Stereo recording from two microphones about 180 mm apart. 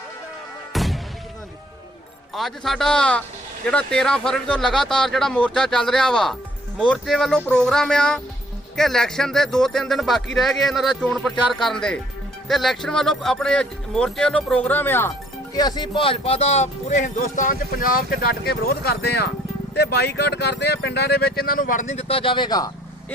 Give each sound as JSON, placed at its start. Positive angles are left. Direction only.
{"t": 0.7, "sound": "music", "side_deg": 0}
{"t": 2.3, "sound": "speech", "side_deg": 0}
{"t": 15.5, "sound": "speech", "side_deg": 20}